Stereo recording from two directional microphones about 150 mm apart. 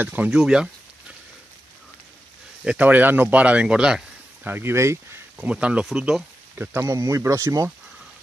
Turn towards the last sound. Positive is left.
turn(degrees=-20)  # may be behind; listen again after turning